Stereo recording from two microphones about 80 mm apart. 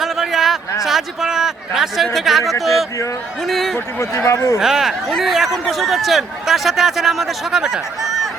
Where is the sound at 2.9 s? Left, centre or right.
Left.